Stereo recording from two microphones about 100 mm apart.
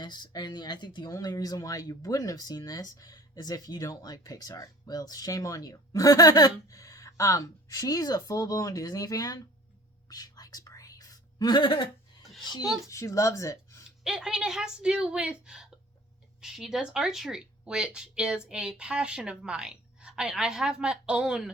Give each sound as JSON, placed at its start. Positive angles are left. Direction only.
{"t": 0.0, "sound": "speech", "side_deg": 45}
{"t": 1.1, "sound": "speech", "side_deg": 35}
{"t": 10.1, "sound": "whispering", "side_deg": 40}
{"t": 12.5, "sound": "speech", "side_deg": 45}
{"t": 12.9, "sound": "speech", "side_deg": 30}
{"t": 14.0, "sound": "speech", "side_deg": -5}